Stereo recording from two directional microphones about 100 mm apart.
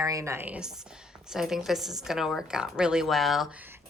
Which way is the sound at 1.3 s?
5° right (ahead or behind).